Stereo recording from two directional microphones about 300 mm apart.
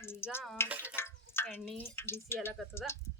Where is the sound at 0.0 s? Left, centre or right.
Centre.